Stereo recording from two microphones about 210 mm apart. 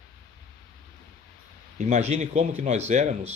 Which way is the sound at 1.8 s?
35° right (ahead or behind).